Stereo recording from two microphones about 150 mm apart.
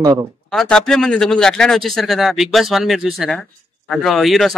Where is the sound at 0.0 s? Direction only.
25° right (ahead or behind).